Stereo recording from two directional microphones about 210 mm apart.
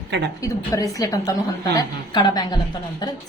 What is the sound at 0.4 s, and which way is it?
A woman's voice, 15° left (ahead or behind).